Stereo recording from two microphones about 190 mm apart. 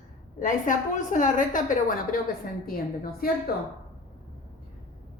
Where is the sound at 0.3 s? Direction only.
45° left (ahead or behind).